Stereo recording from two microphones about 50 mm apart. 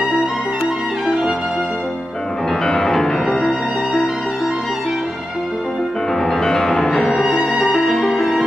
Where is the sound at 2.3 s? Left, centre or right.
Centre.